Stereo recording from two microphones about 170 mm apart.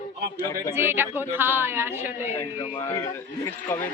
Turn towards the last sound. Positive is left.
turn(degrees=20)  # may be behind; listen again after turning